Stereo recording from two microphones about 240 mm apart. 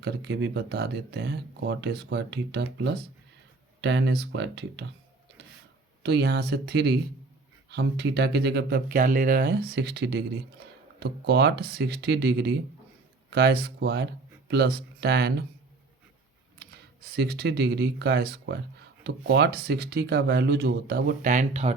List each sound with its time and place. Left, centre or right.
0.0 s speech: right
6.0 s speech: right
16.6 s speech: right